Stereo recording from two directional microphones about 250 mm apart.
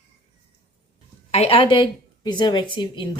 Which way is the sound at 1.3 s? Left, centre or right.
Left.